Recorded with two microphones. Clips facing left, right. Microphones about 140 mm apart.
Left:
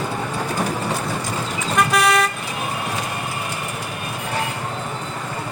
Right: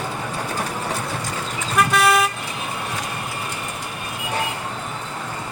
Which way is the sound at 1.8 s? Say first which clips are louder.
Even; centre (ahead or behind).